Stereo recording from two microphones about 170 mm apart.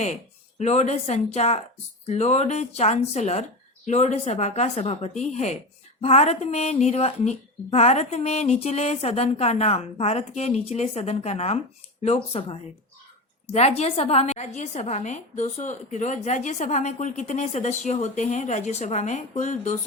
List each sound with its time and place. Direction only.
0.6 s a woman's voice: 40° left (ahead or behind)